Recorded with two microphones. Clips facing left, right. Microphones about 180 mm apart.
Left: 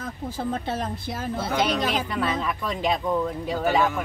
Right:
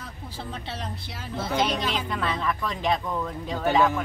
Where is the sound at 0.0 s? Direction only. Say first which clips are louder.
Left 8 dB; 45° left (ahead or behind).